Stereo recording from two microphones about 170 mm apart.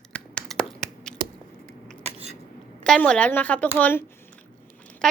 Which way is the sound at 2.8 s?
5° left (ahead or behind).